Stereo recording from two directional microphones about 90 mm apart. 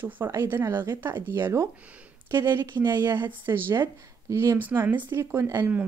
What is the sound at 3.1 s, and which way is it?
Speech, 25° right (ahead or behind).